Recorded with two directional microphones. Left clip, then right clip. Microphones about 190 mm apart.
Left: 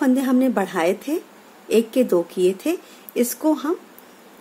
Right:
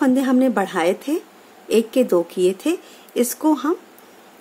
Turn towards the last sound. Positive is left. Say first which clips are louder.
# right 2 dB
turn(degrees=-10)  # may be behind; listen again after turning